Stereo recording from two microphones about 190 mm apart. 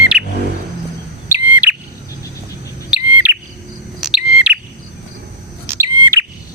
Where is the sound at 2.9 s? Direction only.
5° right (ahead or behind).